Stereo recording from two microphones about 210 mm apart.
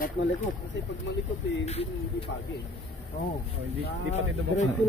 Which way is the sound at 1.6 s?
30° left (ahead or behind).